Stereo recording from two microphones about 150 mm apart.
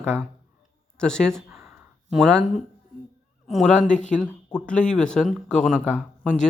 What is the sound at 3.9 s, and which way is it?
Speech, 55° left (ahead or behind).